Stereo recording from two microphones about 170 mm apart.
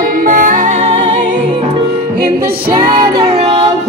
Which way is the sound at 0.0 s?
55° right (ahead or behind).